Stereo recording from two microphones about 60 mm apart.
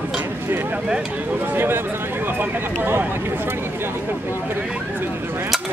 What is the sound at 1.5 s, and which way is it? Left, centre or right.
Speech, right.